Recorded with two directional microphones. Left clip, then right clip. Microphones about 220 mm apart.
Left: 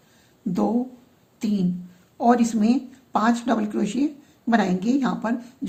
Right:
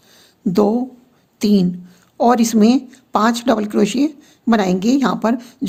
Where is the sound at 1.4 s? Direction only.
50° right (ahead or behind).